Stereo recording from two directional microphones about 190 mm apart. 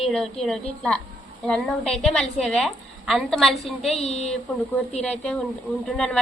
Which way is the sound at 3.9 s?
35° left (ahead or behind).